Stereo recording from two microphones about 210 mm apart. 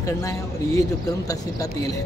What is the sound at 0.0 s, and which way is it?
Speech, 15° left (ahead or behind).